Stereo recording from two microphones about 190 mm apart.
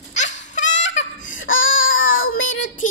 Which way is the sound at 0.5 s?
40° left (ahead or behind).